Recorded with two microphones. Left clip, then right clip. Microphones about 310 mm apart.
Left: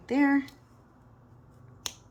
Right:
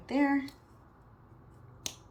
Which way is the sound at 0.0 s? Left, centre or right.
Centre.